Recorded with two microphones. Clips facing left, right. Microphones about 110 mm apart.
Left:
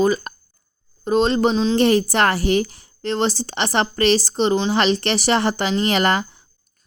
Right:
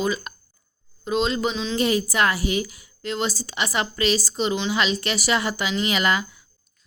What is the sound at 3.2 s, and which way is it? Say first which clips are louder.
A woman's voice: left 5 dB; 60° left (ahead or behind).